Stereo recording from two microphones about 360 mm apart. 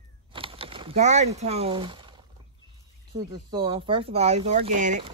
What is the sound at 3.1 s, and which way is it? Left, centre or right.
Speech, centre.